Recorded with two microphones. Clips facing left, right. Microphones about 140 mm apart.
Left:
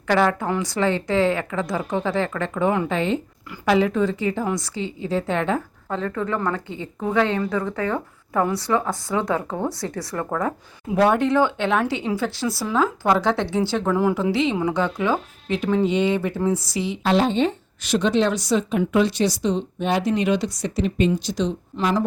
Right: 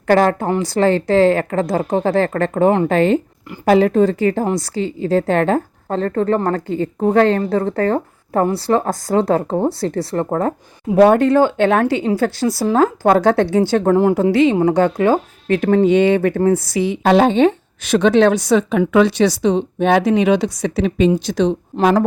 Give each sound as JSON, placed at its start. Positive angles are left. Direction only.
{"t": 0.1, "sound": "a woman's voice", "side_deg": -40}
{"t": 4.1, "sound": "speech", "side_deg": -50}
{"t": 4.4, "sound": "a woman's voice", "side_deg": -35}
{"t": 8.8, "sound": "a woman's voice", "side_deg": -40}
{"t": 11.0, "sound": "speech", "side_deg": -45}